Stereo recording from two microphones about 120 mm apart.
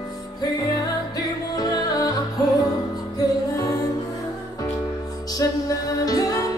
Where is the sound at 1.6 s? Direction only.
30° left (ahead or behind).